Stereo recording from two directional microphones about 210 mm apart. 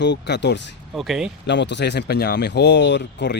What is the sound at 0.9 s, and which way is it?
Speech, centre (ahead or behind).